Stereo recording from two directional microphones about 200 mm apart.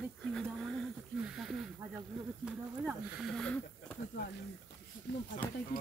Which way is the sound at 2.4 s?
5° right (ahead or behind).